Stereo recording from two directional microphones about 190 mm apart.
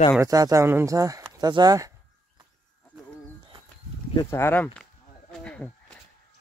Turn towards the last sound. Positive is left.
turn(degrees=5)  # may be behind; listen again after turning